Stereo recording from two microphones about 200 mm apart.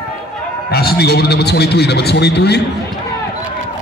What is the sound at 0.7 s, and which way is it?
Speech, 50° left (ahead or behind).